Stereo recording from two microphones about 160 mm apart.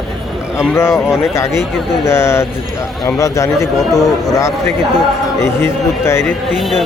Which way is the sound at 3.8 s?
Centre (ahead or behind).